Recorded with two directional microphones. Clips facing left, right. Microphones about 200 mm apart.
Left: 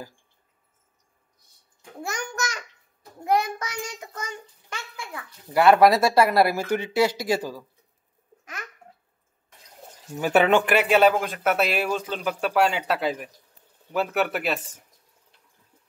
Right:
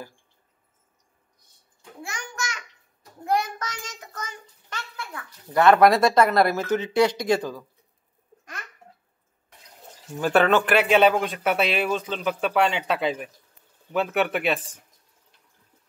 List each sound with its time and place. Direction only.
2.0 s a child's voice: 40° left (ahead or behind)
3.3 s a child's voice: 10° left (ahead or behind)
10.2 s speech: 15° left (ahead or behind)